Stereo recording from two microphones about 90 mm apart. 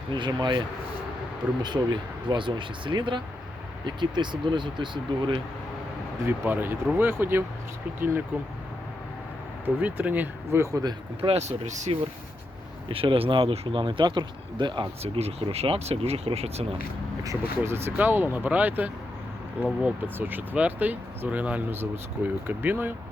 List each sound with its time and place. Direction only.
0.1 s speech: 55° right (ahead or behind)
1.6 s speech: 55° right (ahead or behind)
6.2 s speech: 20° right (ahead or behind)
9.6 s speech: 20° right (ahead or behind)
10.6 s speech: 40° right (ahead or behind)
11.2 s speech: 65° right (ahead or behind)
11.9 s speech: 90° right
17.4 s speech: 25° right (ahead or behind)